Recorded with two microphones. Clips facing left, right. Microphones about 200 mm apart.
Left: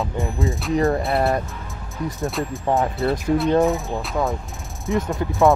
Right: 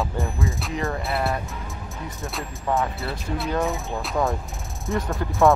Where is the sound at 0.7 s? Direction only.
35° left (ahead or behind).